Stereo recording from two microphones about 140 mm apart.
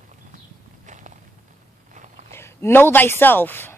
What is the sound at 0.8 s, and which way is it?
Walk, 60° right (ahead or behind).